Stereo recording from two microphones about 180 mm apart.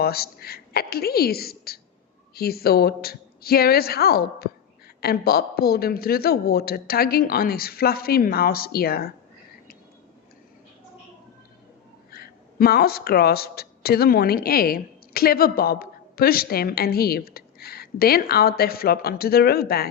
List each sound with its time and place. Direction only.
0.0 s speech: 60° left (ahead or behind)
12.1 s speech: 60° left (ahead or behind)